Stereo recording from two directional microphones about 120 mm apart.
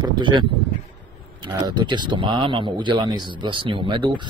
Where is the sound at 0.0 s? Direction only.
40° right (ahead or behind).